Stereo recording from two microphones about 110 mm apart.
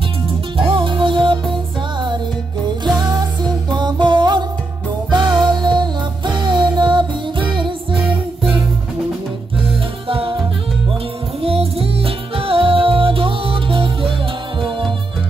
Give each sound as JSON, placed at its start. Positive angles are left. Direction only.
{"t": 0.6, "sound": "music", "side_deg": -50}
{"t": 3.0, "sound": "music", "side_deg": -35}
{"t": 10.0, "sound": "music", "side_deg": -55}
{"t": 11.4, "sound": "music", "side_deg": -60}